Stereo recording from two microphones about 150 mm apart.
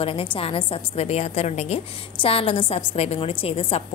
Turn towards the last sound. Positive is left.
turn(degrees=40)  # may be behind; listen again after turning